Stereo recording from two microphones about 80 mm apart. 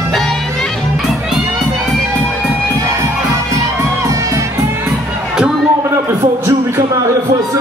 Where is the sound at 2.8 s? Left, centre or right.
Right.